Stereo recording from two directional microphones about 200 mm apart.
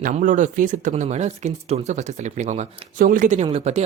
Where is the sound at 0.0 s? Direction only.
40° right (ahead or behind).